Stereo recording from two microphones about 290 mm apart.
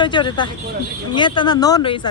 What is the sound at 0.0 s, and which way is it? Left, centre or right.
Speech, centre.